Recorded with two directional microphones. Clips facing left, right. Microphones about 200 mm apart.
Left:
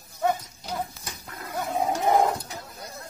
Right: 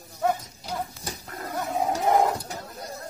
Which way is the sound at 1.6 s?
Centre (ahead or behind).